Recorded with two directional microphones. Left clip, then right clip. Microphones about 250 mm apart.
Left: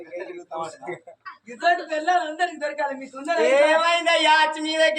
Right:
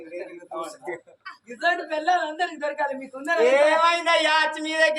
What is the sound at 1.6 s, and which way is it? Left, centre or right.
Speech, centre.